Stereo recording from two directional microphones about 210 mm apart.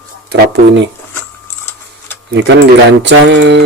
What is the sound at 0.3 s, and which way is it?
Speech, 55° right (ahead or behind).